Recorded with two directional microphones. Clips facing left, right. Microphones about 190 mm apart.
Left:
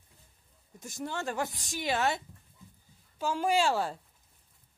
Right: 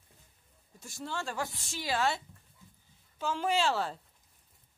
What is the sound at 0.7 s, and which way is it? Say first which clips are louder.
Speech: left 2 dB; 20° left (ahead or behind).